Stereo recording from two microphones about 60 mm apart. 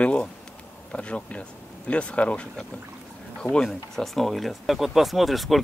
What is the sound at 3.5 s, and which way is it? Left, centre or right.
Speech, centre.